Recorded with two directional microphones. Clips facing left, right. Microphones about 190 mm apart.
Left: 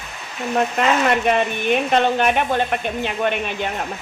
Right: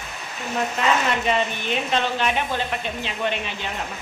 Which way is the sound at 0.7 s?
60° left (ahead or behind).